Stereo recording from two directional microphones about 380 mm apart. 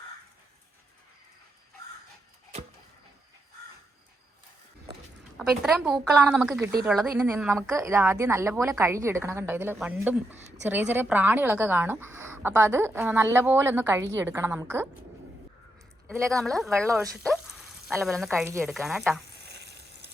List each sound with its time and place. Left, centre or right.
5.4 s a woman's voice: centre
16.0 s speech: centre
19.4 s frying: right